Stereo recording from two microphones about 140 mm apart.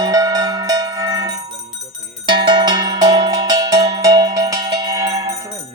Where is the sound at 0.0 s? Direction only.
25° right (ahead or behind).